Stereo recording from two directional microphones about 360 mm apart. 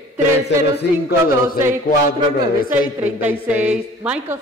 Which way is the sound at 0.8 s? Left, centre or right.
Left.